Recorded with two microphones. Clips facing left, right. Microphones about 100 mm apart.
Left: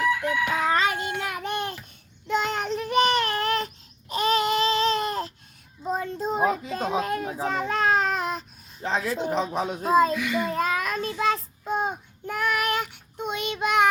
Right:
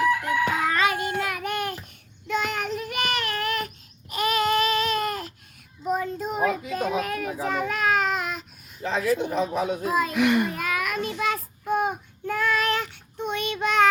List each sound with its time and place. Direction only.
0.7 s child singing: 25° left (ahead or behind)
4.1 s baby cry: 25° left (ahead or behind)
5.9 s children playing: 30° left (ahead or behind)
10.1 s a child's voice: 65° right (ahead or behind)
10.6 s child singing: 30° left (ahead or behind)